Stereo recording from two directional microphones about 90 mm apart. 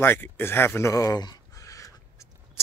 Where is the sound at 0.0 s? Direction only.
20° left (ahead or behind).